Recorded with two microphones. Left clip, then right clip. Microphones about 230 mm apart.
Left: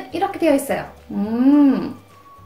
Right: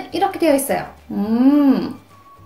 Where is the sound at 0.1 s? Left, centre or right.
Centre.